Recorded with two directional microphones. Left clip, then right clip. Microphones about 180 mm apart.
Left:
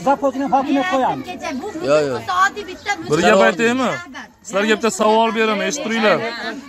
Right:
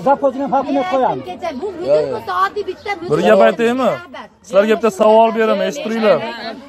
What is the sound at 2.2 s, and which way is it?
Speech, 40° right (ahead or behind).